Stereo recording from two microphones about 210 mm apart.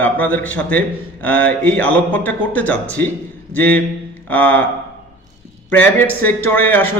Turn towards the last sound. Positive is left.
turn(degrees=10)  # may be behind; listen again after turning